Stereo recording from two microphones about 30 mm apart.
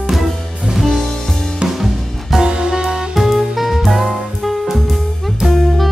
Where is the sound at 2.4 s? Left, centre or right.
Right.